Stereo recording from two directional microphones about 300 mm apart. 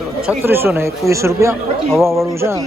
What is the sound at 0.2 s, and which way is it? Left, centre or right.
Speech, centre.